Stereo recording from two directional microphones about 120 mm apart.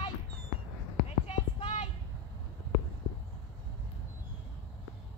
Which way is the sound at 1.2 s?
60° left (ahead or behind).